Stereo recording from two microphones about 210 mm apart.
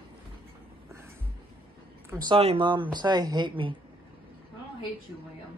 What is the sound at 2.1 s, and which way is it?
Speech, 25° right (ahead or behind).